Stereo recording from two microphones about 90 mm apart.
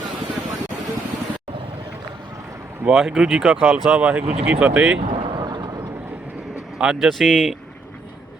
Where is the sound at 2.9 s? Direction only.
5° right (ahead or behind).